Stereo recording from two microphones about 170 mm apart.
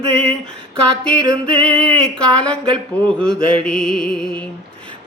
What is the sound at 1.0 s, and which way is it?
Music, 5° left (ahead or behind).